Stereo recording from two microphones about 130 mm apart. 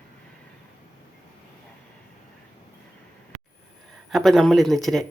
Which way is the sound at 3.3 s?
55° right (ahead or behind).